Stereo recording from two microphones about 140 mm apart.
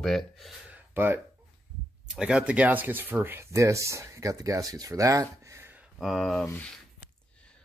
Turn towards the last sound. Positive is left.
turn(degrees=5)  # may be behind; listen again after turning